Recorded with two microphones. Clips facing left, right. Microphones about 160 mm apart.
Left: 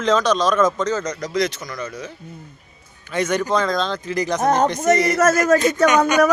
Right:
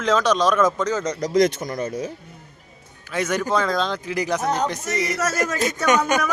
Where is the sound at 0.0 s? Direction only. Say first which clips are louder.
Left 1 dB; 10° right (ahead or behind).